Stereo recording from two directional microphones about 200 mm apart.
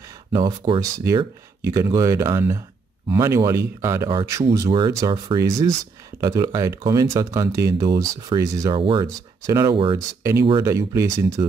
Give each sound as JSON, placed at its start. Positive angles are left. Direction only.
{"t": 0.3, "sound": "speech", "side_deg": -20}